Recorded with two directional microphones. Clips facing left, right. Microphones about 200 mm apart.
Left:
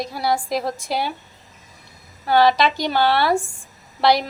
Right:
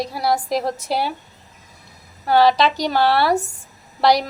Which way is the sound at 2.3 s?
Centre (ahead or behind).